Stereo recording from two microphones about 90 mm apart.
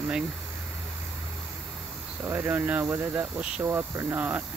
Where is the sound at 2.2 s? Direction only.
25° right (ahead or behind).